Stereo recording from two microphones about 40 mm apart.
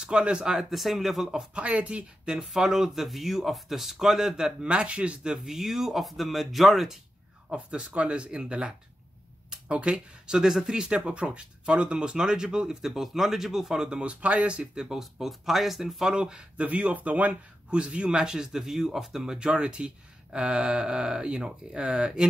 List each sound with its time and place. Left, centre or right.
0.0 s speech: right
0.6 s speech: centre
1.3 s speech: right
2.4 s speech: centre
4.6 s speech: right
5.4 s speech: centre
7.4 s speech: right
12.8 s speech: centre
13.8 s speech: right
14.8 s speech: centre
16.1 s speech: right
16.6 s speech: right
17.6 s speech: right